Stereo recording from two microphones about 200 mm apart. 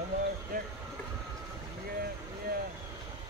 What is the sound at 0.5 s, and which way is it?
Speech, 45° right (ahead or behind).